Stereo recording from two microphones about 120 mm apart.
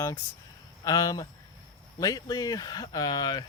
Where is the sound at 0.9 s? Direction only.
30° left (ahead or behind).